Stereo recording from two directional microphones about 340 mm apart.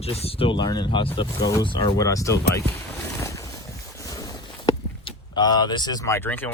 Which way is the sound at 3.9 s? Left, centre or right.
Centre.